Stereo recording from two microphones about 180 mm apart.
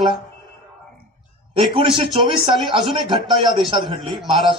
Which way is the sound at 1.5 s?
30° right (ahead or behind).